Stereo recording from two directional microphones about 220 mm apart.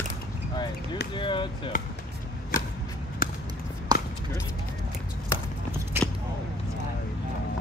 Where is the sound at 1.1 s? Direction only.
20° left (ahead or behind).